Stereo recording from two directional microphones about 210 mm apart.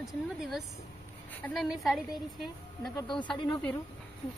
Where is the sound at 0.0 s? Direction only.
Centre (ahead or behind).